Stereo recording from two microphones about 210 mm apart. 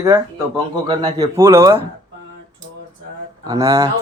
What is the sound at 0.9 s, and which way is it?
Speech, 20° right (ahead or behind).